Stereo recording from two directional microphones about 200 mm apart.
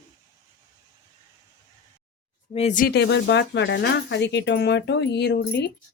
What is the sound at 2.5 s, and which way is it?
Speech, 35° left (ahead or behind).